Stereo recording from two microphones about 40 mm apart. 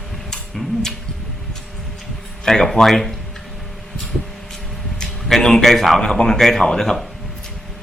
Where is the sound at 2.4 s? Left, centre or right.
Centre.